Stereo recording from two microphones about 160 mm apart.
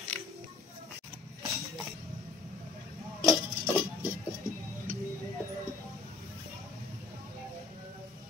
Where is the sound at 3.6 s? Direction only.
15° right (ahead or behind).